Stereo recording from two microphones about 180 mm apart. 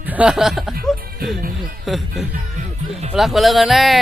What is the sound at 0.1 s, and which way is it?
Speech, 5° right (ahead or behind).